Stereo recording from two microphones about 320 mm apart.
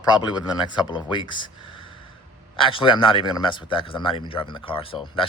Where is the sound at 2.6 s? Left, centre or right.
Centre.